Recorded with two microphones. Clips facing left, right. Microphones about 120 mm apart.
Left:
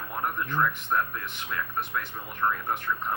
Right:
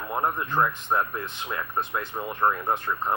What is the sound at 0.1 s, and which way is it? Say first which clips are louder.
Speech: right 4 dB; 35° right (ahead or behind).